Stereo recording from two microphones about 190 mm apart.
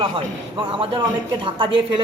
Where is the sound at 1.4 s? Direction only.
25° right (ahead or behind).